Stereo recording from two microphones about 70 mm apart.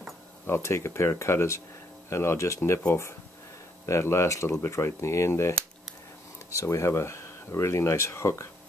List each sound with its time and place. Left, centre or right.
0.5 s speech: left
6.5 s speech: left